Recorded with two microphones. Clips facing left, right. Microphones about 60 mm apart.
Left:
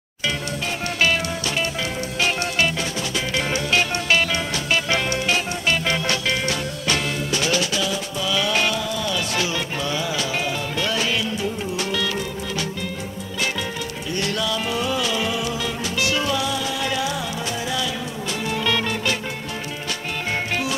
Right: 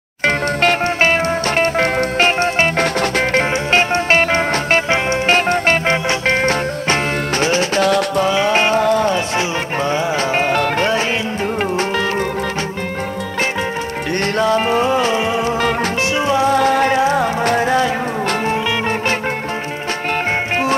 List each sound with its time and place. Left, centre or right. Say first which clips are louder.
0.2 s music: right 11 dB; right
1.0 s music: right 4 dB; right
2.8 s music: right 10 dB; right
3.7 s music: right 6 dB; right
4.8 s music: right 6 dB; right
5.3 s music: right 10 dB; right
7.8 s music: right 11 dB; right
8.3 s a sound: right 3 dB; right
8.8 s music: right 11 dB; right
9.4 s music: right 6 dB; right
14.2 s music: right 9 dB; right
16.4 s music: right 11 dB; right